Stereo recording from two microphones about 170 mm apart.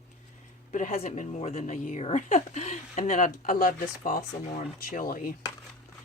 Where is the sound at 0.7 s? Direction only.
50° left (ahead or behind).